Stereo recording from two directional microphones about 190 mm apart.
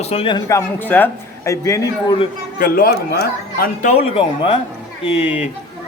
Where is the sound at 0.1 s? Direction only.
25° left (ahead or behind).